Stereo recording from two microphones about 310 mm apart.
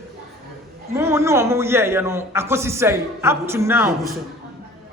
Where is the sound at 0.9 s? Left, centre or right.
Centre.